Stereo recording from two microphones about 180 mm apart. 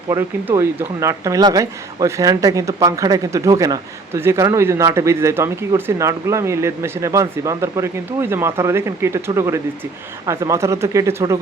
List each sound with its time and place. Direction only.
0.1 s a man's voice: 15° right (ahead or behind)